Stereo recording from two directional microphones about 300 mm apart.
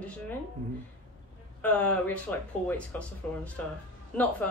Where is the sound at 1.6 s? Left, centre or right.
Centre.